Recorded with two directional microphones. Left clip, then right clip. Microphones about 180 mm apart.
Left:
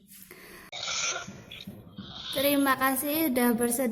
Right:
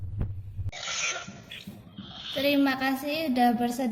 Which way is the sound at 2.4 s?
35° left (ahead or behind).